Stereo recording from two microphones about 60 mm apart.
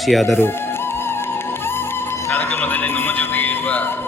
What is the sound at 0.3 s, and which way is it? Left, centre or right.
Music, left.